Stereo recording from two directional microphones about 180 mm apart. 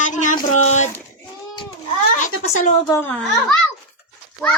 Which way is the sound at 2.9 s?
10° left (ahead or behind).